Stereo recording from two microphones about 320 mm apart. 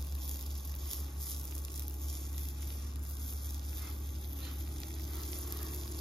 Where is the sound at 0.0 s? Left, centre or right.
Centre.